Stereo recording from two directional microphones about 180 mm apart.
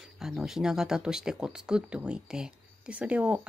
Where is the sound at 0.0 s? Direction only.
Centre (ahead or behind).